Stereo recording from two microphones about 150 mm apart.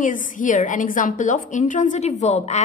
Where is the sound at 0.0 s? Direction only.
60° left (ahead or behind).